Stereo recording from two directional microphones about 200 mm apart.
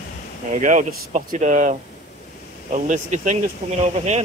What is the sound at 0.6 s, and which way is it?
Speech, 40° right (ahead or behind).